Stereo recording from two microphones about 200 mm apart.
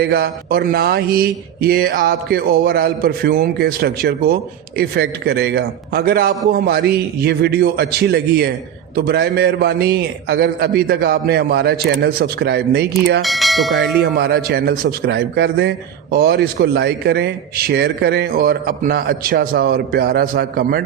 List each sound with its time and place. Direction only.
0.0 s a man's voice: 50° right (ahead or behind)
13.2 s speech: centre (ahead or behind)
14.0 s a man's voice: 50° right (ahead or behind)